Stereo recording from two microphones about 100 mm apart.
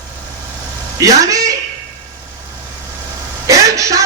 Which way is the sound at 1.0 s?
35° right (ahead or behind).